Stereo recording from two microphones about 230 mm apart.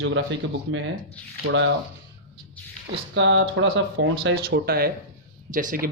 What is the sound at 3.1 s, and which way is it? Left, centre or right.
Speech, right.